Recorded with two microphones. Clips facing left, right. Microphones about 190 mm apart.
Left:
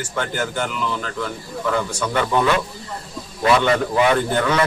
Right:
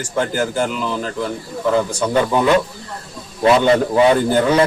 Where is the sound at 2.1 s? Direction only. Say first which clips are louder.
Right 3 dB; 20° right (ahead or behind).